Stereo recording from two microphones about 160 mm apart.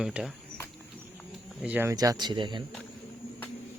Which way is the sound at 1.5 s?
5° right (ahead or behind).